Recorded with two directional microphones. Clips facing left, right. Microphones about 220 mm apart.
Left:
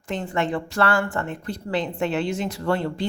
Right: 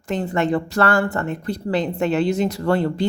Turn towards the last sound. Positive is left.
turn(degrees=-40)  # may be behind; listen again after turning